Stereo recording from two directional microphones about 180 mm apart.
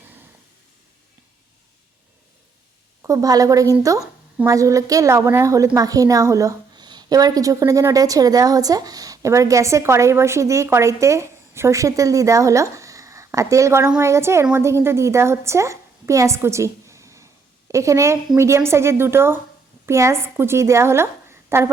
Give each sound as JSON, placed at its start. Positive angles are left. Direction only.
{"t": 3.0, "sound": "a woman's voice", "side_deg": -20}
{"t": 16.8, "sound": "a sound", "side_deg": -15}
{"t": 17.7, "sound": "a woman's voice", "side_deg": -15}